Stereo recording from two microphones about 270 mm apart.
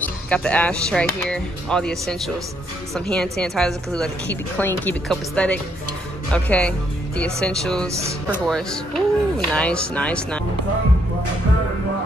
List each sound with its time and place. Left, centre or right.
0.0 s a woman's voice: centre